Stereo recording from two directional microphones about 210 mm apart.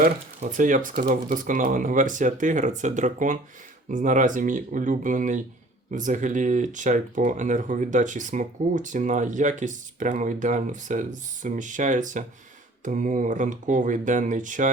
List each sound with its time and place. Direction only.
0.0 s speech: 40° right (ahead or behind)